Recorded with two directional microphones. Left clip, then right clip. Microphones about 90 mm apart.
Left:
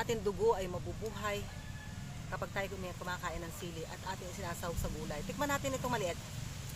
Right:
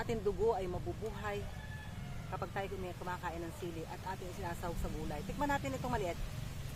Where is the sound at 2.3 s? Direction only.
5° right (ahead or behind).